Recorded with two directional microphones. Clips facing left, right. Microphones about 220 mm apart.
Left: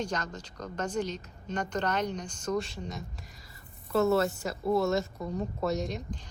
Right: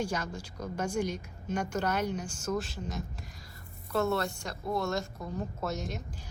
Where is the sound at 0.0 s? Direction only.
10° right (ahead or behind).